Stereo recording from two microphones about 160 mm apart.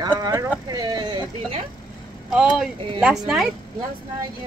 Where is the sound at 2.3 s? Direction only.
5° right (ahead or behind).